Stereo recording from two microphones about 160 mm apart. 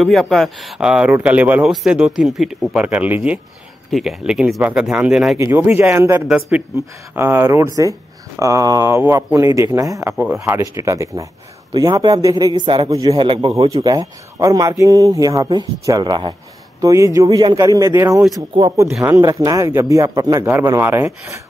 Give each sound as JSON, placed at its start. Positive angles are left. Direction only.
{"t": 0.0, "sound": "speech", "side_deg": 0}
{"t": 5.4, "sound": "a man's voice", "side_deg": -15}